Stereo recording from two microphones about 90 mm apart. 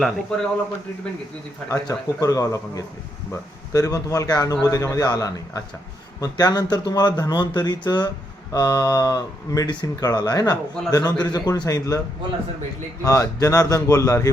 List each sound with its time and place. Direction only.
0.3 s speech: 10° left (ahead or behind)
1.7 s speech: 35° left (ahead or behind)
13.0 s speech: 35° left (ahead or behind)